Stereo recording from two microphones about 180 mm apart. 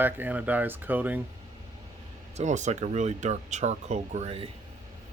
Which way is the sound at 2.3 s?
40° right (ahead or behind).